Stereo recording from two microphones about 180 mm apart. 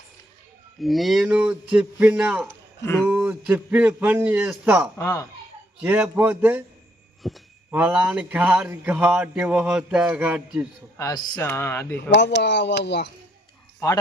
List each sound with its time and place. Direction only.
0.8 s speech: centre (ahead or behind)
2.8 s speech: 15° left (ahead or behind)
3.1 s speech: 10° right (ahead or behind)
4.9 s speech: 15° left (ahead or behind)
5.8 s speech: 10° right (ahead or behind)
10.9 s speech: 20° left (ahead or behind)
11.9 s speech: 70° left (ahead or behind)
13.7 s speech: 20° left (ahead or behind)